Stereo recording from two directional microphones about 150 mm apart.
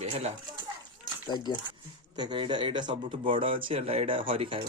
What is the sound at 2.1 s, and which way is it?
Speech, 30° right (ahead or behind).